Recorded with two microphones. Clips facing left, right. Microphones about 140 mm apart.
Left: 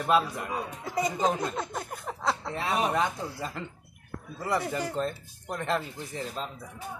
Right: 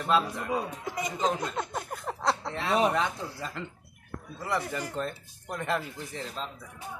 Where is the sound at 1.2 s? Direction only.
10° left (ahead or behind).